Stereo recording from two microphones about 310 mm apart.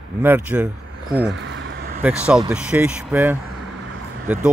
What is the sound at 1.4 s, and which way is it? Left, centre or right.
Vehicle, right.